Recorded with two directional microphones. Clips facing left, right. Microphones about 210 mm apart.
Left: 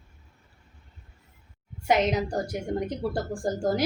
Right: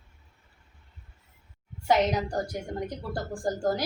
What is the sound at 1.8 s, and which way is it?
A woman's voice, 20° left (ahead or behind).